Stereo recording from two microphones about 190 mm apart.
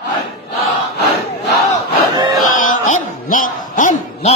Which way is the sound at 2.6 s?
45° left (ahead or behind).